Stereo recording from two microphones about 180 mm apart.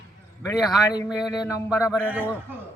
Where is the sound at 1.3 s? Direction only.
15° left (ahead or behind).